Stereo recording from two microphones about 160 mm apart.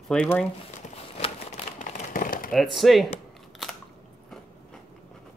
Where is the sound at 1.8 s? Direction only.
55° left (ahead or behind).